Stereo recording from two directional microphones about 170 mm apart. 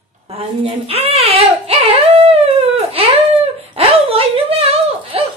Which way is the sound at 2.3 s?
35° right (ahead or behind).